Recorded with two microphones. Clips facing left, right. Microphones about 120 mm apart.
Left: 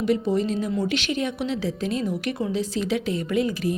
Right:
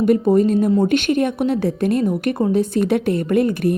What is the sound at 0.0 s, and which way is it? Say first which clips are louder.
A woman's voice: right 8 dB; 50° right (ahead or behind).